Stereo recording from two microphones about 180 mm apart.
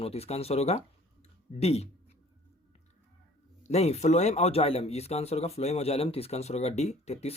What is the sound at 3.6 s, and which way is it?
Speech, 35° left (ahead or behind).